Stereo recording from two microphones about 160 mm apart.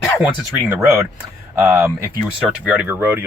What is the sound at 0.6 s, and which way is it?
Speech, 10° right (ahead or behind).